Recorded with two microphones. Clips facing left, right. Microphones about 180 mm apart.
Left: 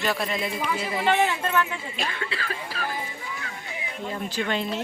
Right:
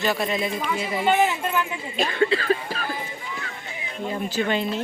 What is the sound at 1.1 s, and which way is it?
Speech, 15° right (ahead or behind).